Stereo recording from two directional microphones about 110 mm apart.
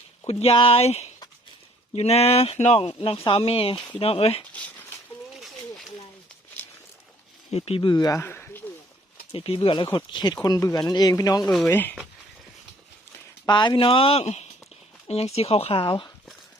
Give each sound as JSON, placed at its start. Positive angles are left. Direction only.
{"t": 0.3, "sound": "speech", "side_deg": 70}
{"t": 7.5, "sound": "speech", "side_deg": 65}
{"t": 7.8, "sound": "speech", "side_deg": 40}
{"t": 8.2, "sound": "a sound", "side_deg": 20}
{"t": 9.3, "sound": "speech", "side_deg": 55}
{"t": 11.7, "sound": "speech", "side_deg": 15}
{"t": 13.5, "sound": "speech", "side_deg": 45}
{"t": 15.7, "sound": "speech", "side_deg": 50}